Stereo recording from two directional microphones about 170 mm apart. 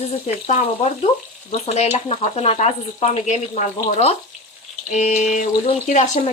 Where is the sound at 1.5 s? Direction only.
40° left (ahead or behind).